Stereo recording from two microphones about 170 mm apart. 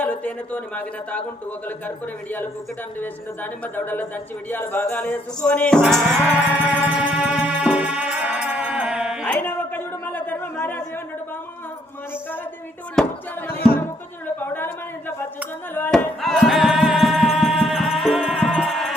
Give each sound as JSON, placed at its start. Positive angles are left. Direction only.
{"t": 0.0, "sound": "speech", "side_deg": 5}
{"t": 3.0, "sound": "speech", "side_deg": 10}
{"t": 5.8, "sound": "music", "side_deg": 0}
{"t": 6.2, "sound": "music", "side_deg": -10}
{"t": 9.2, "sound": "a sound", "side_deg": 10}
{"t": 13.0, "sound": "a sound", "side_deg": 5}
{"t": 13.5, "sound": "music", "side_deg": 65}
{"t": 14.3, "sound": "a sound", "side_deg": 10}
{"t": 15.7, "sound": "speech", "side_deg": 10}
{"t": 16.2, "sound": "music", "side_deg": 0}